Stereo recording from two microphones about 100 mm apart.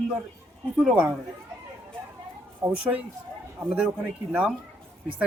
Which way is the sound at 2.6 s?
20° right (ahead or behind).